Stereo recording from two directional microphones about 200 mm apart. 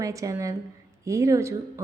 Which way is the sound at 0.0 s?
15° right (ahead or behind).